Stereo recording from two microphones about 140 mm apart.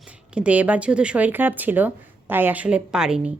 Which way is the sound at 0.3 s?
10° right (ahead or behind).